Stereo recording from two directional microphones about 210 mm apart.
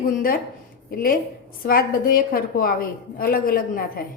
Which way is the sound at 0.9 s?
45° left (ahead or behind).